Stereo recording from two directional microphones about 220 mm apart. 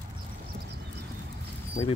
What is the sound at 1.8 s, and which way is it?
Speech, 35° left (ahead or behind).